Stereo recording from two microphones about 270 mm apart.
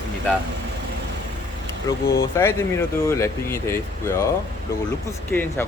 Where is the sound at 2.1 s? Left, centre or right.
Centre.